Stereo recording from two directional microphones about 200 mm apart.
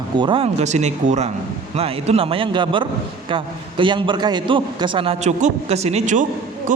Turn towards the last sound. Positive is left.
turn(degrees=-40)  # may be behind; listen again after turning